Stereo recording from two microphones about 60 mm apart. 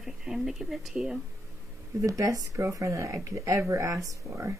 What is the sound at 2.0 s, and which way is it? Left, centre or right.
Speech, right.